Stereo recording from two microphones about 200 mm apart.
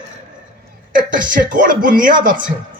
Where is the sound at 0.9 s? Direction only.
40° right (ahead or behind).